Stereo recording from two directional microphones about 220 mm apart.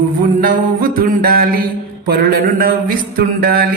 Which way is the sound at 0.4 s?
40° right (ahead or behind).